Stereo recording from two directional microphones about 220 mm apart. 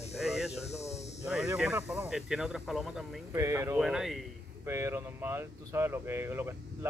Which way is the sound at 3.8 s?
Centre (ahead or behind).